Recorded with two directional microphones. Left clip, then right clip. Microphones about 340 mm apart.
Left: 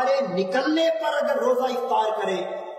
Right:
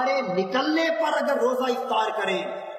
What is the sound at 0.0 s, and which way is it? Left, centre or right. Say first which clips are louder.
Music: left 2 dB; left.